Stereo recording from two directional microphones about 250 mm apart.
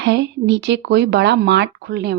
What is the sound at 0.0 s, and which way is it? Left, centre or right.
Speech, right.